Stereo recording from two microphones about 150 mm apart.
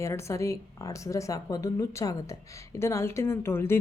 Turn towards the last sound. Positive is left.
turn(degrees=15)  # may be behind; listen again after turning